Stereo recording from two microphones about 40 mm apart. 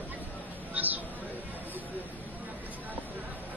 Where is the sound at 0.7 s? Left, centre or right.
Right.